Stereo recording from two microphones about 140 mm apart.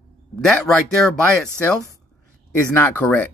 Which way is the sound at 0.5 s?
5° left (ahead or behind).